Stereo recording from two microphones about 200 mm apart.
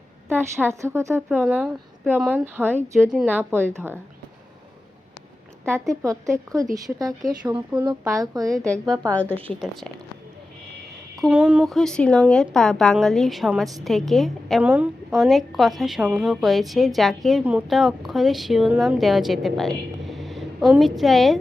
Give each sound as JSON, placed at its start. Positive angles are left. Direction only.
{"t": 0.6, "sound": "speech", "side_deg": -15}
{"t": 5.9, "sound": "speech", "side_deg": -15}
{"t": 7.2, "sound": "a woman's voice", "side_deg": 0}
{"t": 7.9, "sound": "speech", "side_deg": -15}
{"t": 8.5, "sound": "a woman's voice", "side_deg": 5}
{"t": 11.2, "sound": "a woman's voice", "side_deg": -5}